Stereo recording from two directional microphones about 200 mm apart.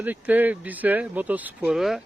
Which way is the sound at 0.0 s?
10° right (ahead or behind).